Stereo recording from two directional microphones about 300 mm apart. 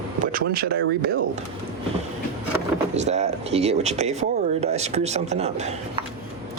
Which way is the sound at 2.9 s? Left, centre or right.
Right.